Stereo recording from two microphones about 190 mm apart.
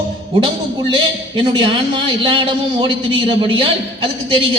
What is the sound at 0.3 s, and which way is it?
A man's voice, 25° right (ahead or behind).